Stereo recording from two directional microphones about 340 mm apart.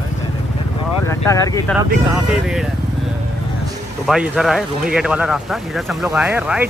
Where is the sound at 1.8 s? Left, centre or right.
Centre.